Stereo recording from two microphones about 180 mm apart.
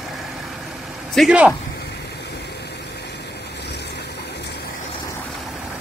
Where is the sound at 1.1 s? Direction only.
5° right (ahead or behind).